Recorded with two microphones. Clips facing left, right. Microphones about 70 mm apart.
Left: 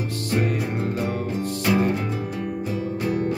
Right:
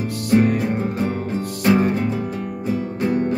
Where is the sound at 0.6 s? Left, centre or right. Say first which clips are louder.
Right 5 dB; right.